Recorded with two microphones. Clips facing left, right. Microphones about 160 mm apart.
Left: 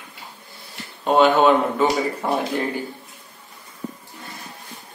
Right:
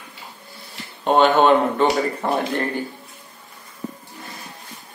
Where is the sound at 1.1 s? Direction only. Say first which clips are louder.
Even; centre (ahead or behind).